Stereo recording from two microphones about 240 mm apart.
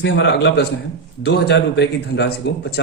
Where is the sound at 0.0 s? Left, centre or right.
Left.